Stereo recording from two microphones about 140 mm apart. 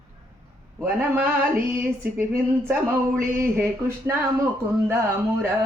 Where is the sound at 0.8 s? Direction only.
15° right (ahead or behind).